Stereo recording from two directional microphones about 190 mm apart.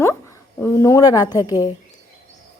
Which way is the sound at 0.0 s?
15° left (ahead or behind).